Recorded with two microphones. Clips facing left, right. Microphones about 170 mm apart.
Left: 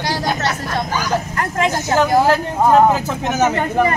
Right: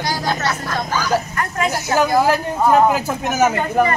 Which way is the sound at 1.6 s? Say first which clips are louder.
Left 1 dB; 10° right (ahead or behind).